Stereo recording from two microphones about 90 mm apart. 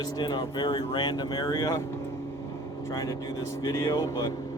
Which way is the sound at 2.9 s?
40° left (ahead or behind).